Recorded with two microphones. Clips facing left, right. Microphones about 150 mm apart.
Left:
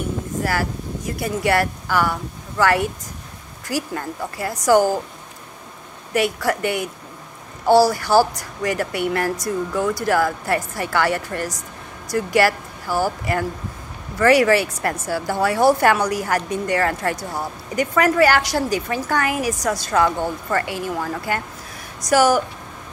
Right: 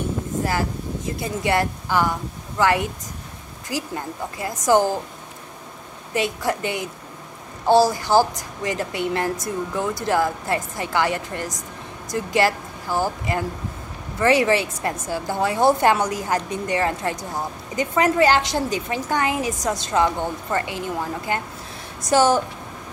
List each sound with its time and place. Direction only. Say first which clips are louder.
0.4 s a woman's voice: left 1 dB; 20° right (ahead or behind)
6.1 s a woman's voice: left 3 dB; 20° right (ahead or behind)